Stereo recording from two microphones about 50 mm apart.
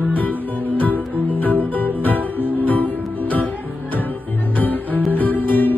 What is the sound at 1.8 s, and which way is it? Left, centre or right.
Music, left.